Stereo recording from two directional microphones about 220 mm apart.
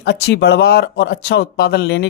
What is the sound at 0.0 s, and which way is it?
Speech, 50° left (ahead or behind).